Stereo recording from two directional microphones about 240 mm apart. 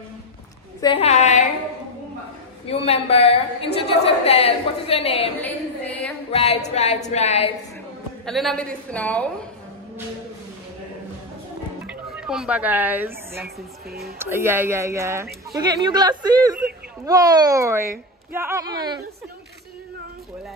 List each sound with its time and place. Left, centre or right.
0.7 s a woman's voice: left
2.6 s a woman's voice: left
5.4 s a sound: centre
6.3 s a woman's voice: left
8.3 s a woman's voice: centre
11.8 s speech: centre
13.8 s speech: right
14.1 s a woman's voice: centre